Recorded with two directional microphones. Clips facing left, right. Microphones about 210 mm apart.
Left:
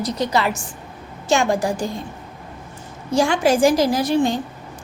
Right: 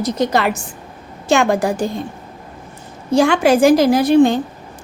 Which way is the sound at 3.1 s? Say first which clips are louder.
Right 4 dB; 60° right (ahead or behind).